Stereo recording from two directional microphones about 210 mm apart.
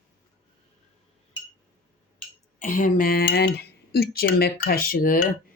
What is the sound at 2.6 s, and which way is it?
Speech, 40° left (ahead or behind).